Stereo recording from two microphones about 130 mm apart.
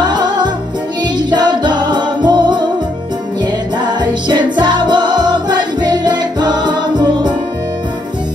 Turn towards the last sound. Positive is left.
turn(degrees=-35)  # may be behind; listen again after turning